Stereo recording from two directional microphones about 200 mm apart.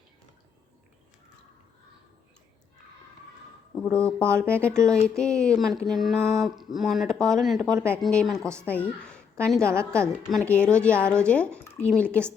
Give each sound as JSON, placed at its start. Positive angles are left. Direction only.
{"t": 3.9, "sound": "a woman's voice", "side_deg": 5}